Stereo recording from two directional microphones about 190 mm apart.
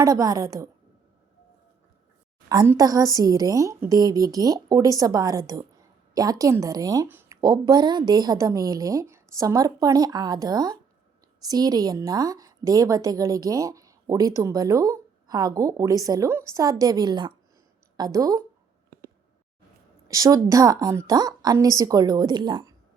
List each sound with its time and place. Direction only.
0.0 s a woman's voice: 15° right (ahead or behind)
2.5 s a woman's voice: 20° right (ahead or behind)
18.9 s a sound: 50° right (ahead or behind)
20.1 s a woman's voice: 20° right (ahead or behind)